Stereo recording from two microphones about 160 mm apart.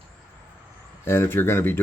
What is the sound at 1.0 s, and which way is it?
Speech, 15° left (ahead or behind).